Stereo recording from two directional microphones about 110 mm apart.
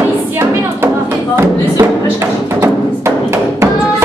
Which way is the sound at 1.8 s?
25° right (ahead or behind).